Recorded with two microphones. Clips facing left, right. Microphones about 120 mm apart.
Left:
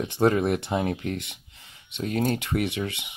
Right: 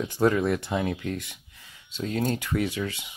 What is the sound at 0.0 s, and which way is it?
Speech, 25° left (ahead or behind).